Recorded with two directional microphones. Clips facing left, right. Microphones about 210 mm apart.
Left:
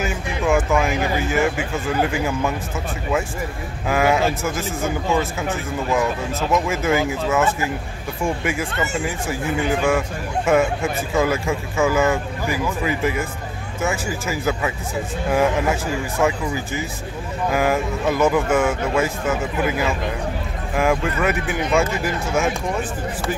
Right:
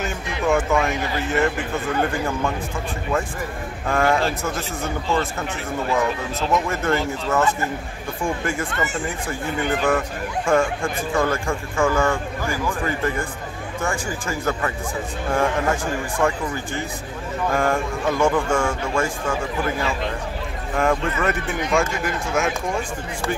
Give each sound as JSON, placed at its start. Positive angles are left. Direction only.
{"t": 0.0, "sound": "speech", "side_deg": 0}
{"t": 3.8, "sound": "speech", "side_deg": 5}
{"t": 6.5, "sound": "speech", "side_deg": 5}
{"t": 16.2, "sound": "speech", "side_deg": 5}